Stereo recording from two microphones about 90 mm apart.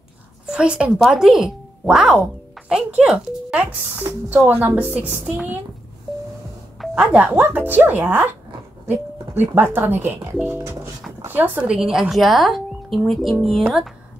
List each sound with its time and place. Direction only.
0.5 s a woman's voice: 10° right (ahead or behind)
3.5 s speech: 20° right (ahead or behind)
6.8 s a woman's voice: 10° right (ahead or behind)